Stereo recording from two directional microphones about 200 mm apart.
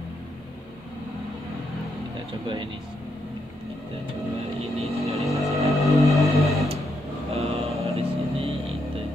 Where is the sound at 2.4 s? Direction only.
25° right (ahead or behind).